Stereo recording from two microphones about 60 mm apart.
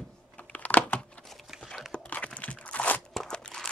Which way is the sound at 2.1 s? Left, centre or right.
Left.